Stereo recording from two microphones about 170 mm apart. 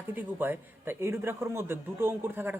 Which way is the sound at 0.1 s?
10° right (ahead or behind).